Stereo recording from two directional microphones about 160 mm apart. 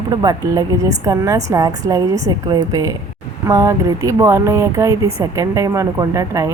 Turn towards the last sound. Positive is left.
turn(degrees=-20)  # may be behind; listen again after turning